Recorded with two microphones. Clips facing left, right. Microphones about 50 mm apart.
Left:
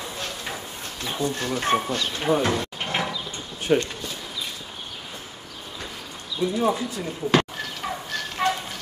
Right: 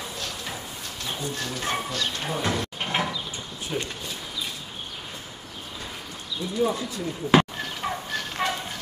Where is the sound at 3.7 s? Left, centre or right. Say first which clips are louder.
Left 10 dB; left.